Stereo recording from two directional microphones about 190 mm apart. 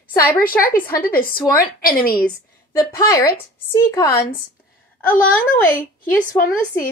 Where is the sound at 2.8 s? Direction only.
15° left (ahead or behind).